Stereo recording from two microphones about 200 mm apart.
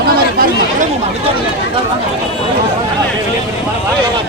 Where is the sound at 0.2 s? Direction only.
45° right (ahead or behind).